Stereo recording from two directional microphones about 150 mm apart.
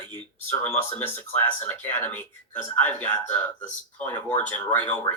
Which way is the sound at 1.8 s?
15° left (ahead or behind).